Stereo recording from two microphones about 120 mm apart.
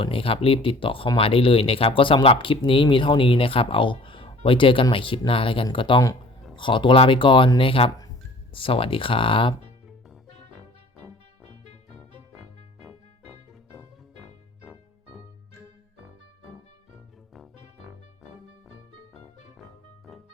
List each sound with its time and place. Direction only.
0.0 s speech: 50° left (ahead or behind)
12.8 s music: 5° right (ahead or behind)
17.3 s music: centre (ahead or behind)